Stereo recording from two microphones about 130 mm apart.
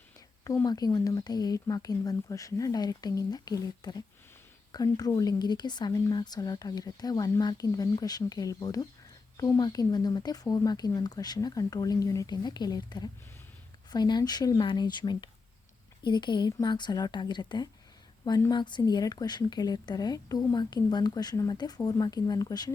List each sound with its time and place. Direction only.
0.4 s a woman's voice: 25° left (ahead or behind)
18.3 s speech: 25° left (ahead or behind)
18.5 s a woman's voice: 35° left (ahead or behind)